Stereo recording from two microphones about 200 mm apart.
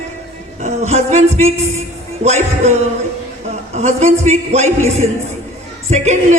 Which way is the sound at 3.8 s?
35° right (ahead or behind).